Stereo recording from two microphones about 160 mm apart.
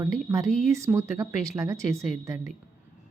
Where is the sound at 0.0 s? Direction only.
20° right (ahead or behind).